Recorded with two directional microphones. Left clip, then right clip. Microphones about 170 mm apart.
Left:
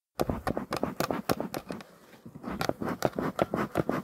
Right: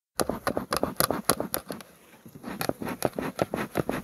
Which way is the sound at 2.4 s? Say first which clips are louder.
Even; 5° left (ahead or behind).